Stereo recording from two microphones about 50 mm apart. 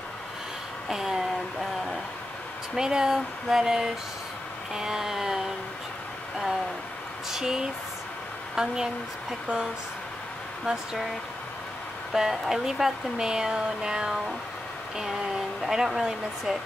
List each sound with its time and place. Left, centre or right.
0.8 s speech: centre
2.7 s speech: centre
7.2 s speech: centre
10.6 s speech: centre
12.1 s speech: centre